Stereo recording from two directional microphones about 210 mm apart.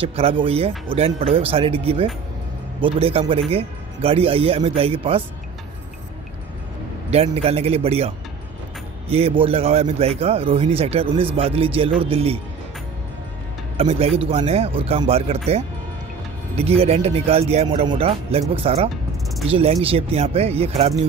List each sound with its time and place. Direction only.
0.0 s a man's voice: 30° right (ahead or behind)
7.1 s a man's voice: 30° right (ahead or behind)
9.1 s a man's voice: 25° right (ahead or behind)
13.7 s a man's voice: 30° right (ahead or behind)